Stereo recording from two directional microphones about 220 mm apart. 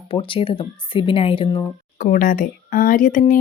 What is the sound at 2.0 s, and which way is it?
A woman's voice, 40° left (ahead or behind).